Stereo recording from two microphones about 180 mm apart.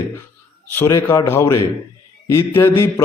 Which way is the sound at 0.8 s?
15° left (ahead or behind).